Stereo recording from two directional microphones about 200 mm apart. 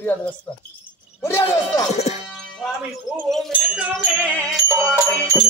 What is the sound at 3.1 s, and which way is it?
Speech, centre (ahead or behind).